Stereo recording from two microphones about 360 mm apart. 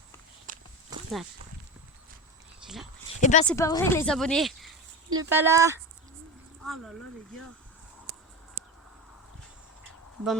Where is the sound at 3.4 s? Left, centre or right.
Centre.